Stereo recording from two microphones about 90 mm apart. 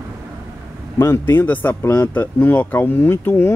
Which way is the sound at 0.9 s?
30° left (ahead or behind).